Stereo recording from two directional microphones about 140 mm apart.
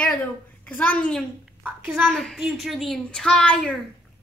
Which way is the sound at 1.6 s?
10° right (ahead or behind).